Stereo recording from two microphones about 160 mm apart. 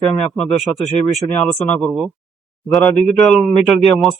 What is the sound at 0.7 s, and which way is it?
A man's voice, 15° left (ahead or behind).